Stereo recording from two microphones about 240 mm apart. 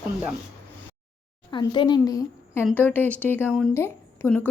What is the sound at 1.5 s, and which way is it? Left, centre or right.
A woman's voice, centre.